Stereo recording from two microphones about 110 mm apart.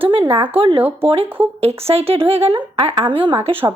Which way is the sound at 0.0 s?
55° right (ahead or behind).